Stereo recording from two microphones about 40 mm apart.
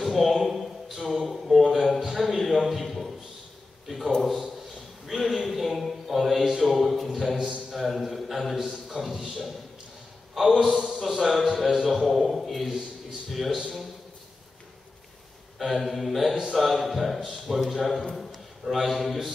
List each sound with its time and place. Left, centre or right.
0.0 s a man's voice: centre
7.3 s a man's voice: centre
7.7 s a man's voice: centre
15.6 s a man's voice: centre